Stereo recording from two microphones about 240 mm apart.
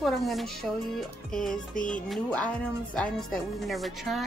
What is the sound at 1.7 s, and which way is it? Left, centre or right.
Music, left.